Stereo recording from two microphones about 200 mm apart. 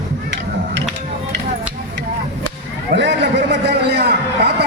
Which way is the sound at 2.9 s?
60° right (ahead or behind).